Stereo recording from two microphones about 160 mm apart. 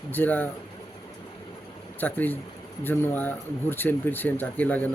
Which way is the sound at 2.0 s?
10° left (ahead or behind).